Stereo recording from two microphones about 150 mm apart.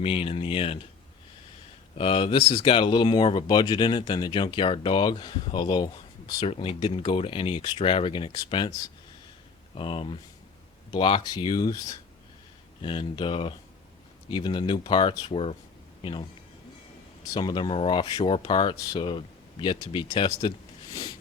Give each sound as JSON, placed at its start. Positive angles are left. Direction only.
{"t": 0.0, "sound": "speech", "side_deg": 40}
{"t": 2.0, "sound": "speech", "side_deg": 35}
{"t": 9.7, "sound": "speech", "side_deg": 35}
{"t": 17.2, "sound": "speech", "side_deg": 30}